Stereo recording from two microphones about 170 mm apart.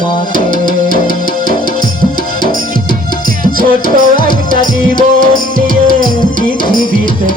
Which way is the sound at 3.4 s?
55° right (ahead or behind).